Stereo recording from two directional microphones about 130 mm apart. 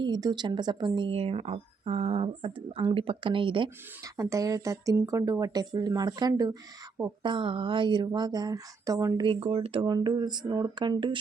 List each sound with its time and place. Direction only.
0.0 s a woman's voice: 35° right (ahead or behind)
4.0 s a woman's voice: 25° right (ahead or behind)
9.2 s a woman's voice: 45° right (ahead or behind)